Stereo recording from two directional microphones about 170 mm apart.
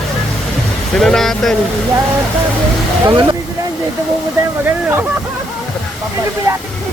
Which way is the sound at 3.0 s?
25° right (ahead or behind).